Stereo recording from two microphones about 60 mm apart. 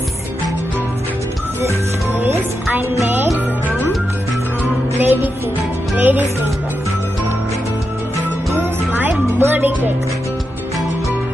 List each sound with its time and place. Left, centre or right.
2.2 s music: right
4.9 s music: right
8.5 s music: right
9.4 s speech: right